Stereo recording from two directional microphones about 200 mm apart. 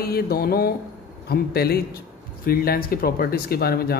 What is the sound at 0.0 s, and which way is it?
Speech, 50° left (ahead or behind).